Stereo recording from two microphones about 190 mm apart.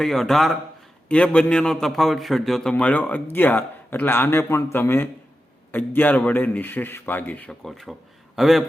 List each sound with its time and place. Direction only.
0.0 s a man's voice: centre (ahead or behind)